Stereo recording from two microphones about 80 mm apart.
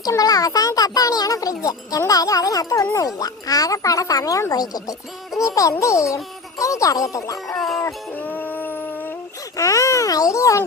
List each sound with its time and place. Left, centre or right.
0.1 s a child's voice: left
7.4 s music: centre
8.1 s howl: left
9.6 s a child's voice: left